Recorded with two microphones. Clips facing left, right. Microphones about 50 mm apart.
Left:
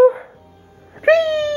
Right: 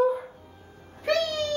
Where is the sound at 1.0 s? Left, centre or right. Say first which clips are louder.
Left 11 dB; left.